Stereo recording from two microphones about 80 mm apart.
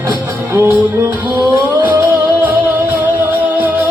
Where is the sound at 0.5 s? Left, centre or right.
Right.